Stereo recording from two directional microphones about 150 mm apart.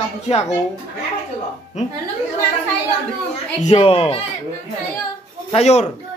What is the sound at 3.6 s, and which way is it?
Speech, 40° left (ahead or behind).